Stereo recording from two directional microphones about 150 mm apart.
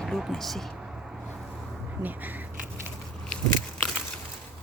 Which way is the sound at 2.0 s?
10° right (ahead or behind).